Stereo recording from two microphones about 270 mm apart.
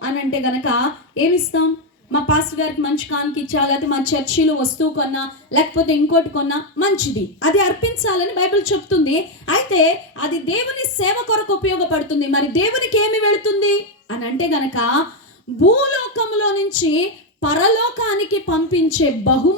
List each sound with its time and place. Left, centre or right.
0.3 s a woman's voice: left